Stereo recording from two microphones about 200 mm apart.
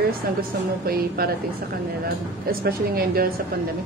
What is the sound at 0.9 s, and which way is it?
Speech, 50° right (ahead or behind).